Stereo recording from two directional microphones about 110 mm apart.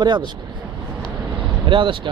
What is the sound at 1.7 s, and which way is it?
Speech, 50° right (ahead or behind).